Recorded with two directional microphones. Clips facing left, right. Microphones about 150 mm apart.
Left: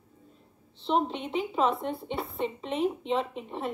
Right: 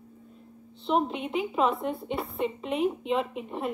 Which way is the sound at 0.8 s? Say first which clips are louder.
Right 1 dB; 5° right (ahead or behind).